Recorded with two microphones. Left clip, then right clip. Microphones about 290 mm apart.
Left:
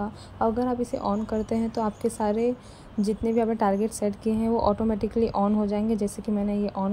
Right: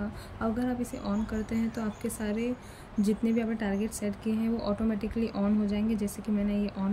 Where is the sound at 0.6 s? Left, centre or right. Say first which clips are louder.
Left 7 dB; centre.